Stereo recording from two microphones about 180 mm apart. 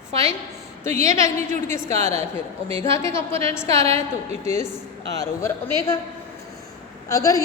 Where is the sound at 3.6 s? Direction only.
35° right (ahead or behind).